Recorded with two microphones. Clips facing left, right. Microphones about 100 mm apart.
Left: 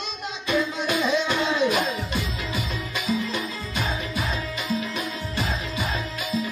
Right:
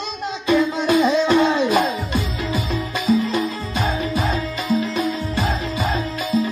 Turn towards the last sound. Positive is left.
turn(degrees=-35)  # may be behind; listen again after turning